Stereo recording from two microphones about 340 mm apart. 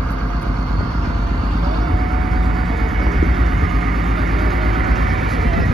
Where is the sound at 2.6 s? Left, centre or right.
Centre.